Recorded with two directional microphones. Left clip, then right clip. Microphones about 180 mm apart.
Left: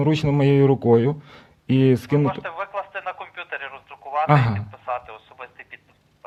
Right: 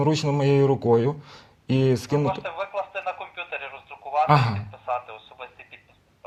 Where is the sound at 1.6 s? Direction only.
35° left (ahead or behind).